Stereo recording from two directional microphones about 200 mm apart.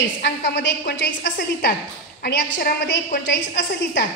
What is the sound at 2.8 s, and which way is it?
A woman's voice, 60° left (ahead or behind).